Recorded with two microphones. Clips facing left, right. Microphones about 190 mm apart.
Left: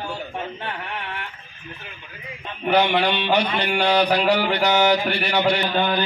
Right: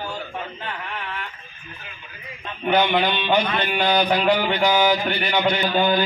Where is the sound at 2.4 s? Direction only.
5° left (ahead or behind).